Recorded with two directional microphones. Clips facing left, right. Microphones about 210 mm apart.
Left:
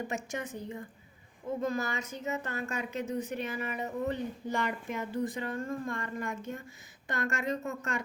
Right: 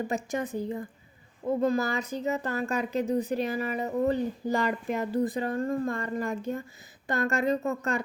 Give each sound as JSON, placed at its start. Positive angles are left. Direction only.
{"t": 0.1, "sound": "speech", "side_deg": -35}